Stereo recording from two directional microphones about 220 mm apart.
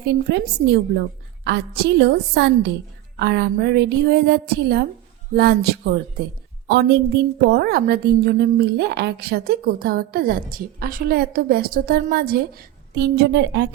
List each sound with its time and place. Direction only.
0.0 s a woman's voice: 50° right (ahead or behind)